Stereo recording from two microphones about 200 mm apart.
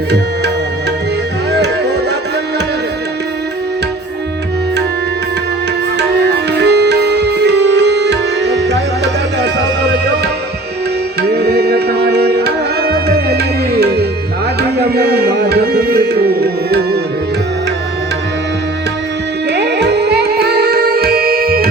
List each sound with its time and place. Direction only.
1.5 s music: 60° right (ahead or behind)
6.0 s music: 60° right (ahead or behind)
11.2 s tabla: 55° right (ahead or behind)
19.5 s music: 60° right (ahead or behind)